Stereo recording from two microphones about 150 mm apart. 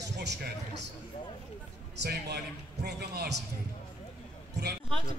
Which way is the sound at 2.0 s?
90° right.